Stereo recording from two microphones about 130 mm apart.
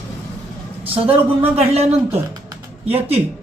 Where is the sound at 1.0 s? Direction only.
50° right (ahead or behind).